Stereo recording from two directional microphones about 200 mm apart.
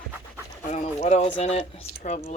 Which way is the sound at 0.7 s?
35° left (ahead or behind).